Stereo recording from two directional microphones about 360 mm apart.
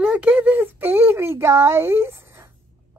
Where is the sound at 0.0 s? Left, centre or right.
Centre.